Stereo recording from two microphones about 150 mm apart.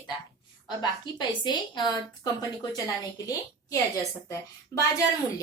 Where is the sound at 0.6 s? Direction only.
30° left (ahead or behind).